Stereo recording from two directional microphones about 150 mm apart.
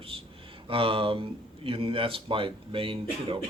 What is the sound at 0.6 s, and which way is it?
Speech, 40° right (ahead or behind).